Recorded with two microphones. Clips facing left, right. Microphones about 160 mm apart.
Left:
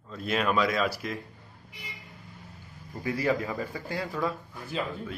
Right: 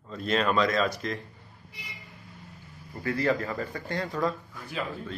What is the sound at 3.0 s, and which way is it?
Speech, 10° left (ahead or behind).